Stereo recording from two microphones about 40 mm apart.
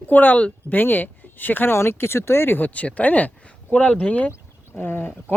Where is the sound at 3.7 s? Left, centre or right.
Left.